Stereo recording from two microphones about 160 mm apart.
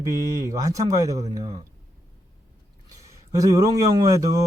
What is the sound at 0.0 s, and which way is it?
A man's voice, 20° right (ahead or behind).